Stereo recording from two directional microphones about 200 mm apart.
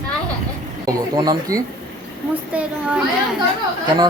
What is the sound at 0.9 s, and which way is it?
Speech, 20° right (ahead or behind).